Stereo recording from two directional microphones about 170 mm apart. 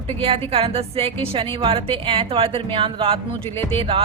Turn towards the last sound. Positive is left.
turn(degrees=-35)  # may be behind; listen again after turning